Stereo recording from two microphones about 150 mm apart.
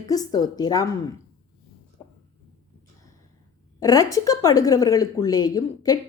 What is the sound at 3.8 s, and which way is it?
A woman's voice, 25° left (ahead or behind).